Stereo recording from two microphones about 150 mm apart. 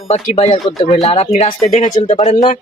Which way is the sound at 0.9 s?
45° left (ahead or behind).